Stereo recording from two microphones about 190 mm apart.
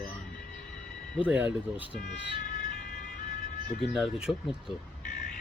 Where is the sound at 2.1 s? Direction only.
65° left (ahead or behind).